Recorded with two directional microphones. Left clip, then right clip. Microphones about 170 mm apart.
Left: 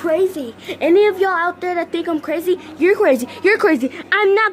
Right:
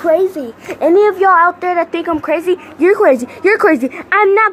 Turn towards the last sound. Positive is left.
turn(degrees=15)  # may be behind; listen again after turning